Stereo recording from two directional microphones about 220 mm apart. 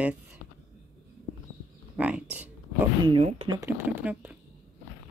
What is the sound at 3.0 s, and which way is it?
Speech, 25° right (ahead or behind).